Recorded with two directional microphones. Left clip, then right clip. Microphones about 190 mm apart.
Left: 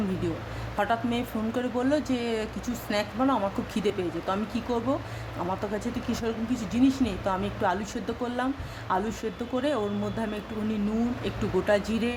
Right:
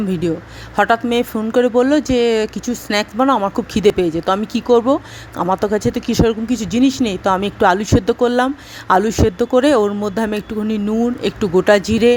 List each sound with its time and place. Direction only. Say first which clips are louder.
0.8 s speech: right 13 dB; 50° right (ahead or behind)